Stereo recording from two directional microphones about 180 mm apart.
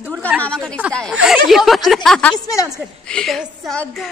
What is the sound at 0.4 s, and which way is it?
Speech, 5° left (ahead or behind).